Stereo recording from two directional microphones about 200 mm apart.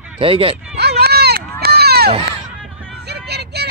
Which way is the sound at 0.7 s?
55° right (ahead or behind).